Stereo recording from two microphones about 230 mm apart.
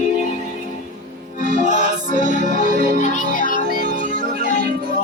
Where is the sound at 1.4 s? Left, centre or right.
Right.